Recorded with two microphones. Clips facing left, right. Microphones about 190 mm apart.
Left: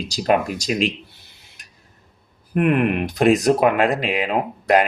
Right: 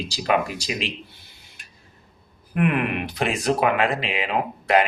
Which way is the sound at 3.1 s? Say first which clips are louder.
Left 7 dB; 45° left (ahead or behind).